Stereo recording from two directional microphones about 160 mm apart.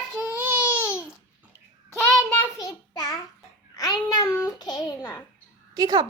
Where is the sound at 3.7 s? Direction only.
20° left (ahead or behind).